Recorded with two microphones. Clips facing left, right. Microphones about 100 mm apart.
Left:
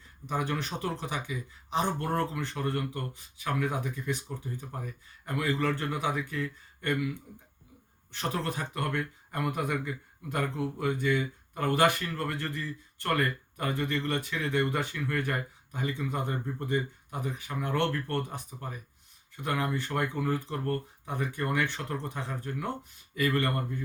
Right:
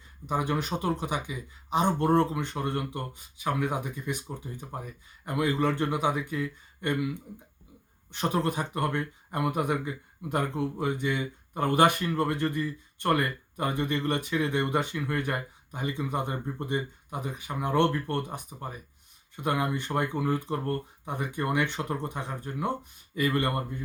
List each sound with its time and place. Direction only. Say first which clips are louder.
0.3 s speech: right 3 dB; 15° right (ahead or behind)
5.2 s speech: right 3 dB; 20° right (ahead or behind)
19.4 s speech: right 2 dB; 15° right (ahead or behind)